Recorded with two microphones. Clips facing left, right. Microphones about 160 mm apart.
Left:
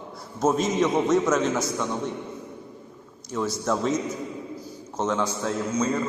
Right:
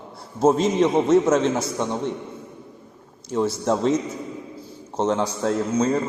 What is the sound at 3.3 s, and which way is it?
A man's voice, 30° right (ahead or behind).